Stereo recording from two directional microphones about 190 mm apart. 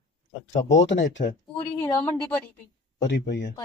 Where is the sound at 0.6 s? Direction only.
70° left (ahead or behind).